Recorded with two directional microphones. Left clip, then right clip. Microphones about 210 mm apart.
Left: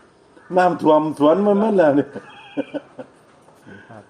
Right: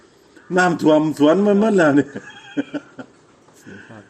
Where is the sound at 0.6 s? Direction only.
35° right (ahead or behind).